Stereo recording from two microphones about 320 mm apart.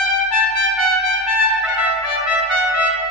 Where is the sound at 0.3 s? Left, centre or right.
Left.